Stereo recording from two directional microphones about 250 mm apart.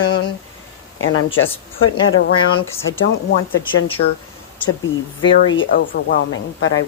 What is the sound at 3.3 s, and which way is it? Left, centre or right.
Speech, left.